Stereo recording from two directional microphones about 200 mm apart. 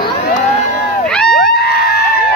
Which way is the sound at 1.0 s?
5° left (ahead or behind).